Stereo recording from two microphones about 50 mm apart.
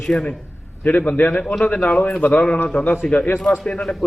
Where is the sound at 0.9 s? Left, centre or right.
Left.